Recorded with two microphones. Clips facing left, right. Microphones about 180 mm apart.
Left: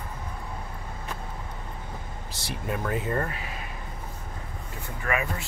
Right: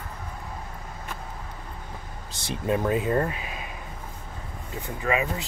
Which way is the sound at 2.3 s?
20° right (ahead or behind).